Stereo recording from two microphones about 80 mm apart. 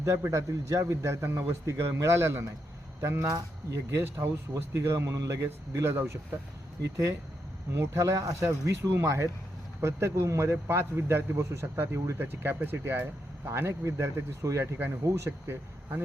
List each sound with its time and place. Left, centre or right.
0.0 s a man's voice: right
4.5 s a man's voice: right
5.9 s speech: right
6.9 s a man's voice: right